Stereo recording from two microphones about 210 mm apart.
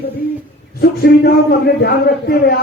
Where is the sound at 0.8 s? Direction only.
50° left (ahead or behind).